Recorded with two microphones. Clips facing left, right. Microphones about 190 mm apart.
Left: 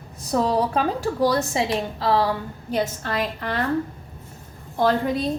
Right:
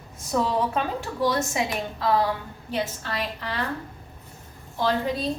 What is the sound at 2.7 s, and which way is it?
Speech, 45° left (ahead or behind).